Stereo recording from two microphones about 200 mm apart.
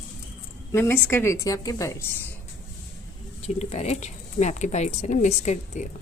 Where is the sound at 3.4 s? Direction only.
30° left (ahead or behind).